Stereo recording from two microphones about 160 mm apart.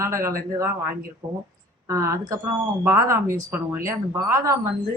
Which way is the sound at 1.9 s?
20° right (ahead or behind).